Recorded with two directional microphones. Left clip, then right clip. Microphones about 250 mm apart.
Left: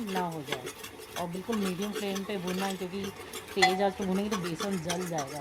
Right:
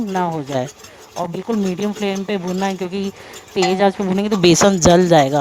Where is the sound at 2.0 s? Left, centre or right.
Right.